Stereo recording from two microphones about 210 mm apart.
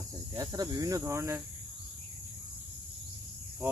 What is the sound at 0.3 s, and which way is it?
Speech, 15° right (ahead or behind).